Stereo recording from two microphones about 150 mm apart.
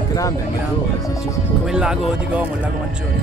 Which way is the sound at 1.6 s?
5° right (ahead or behind).